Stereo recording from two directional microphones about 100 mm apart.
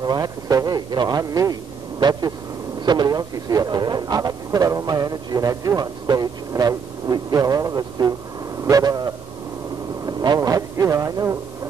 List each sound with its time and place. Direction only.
0.0 s a man's voice: 40° right (ahead or behind)